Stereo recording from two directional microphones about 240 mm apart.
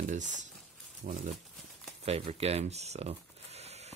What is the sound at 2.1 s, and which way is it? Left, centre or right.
Speech, right.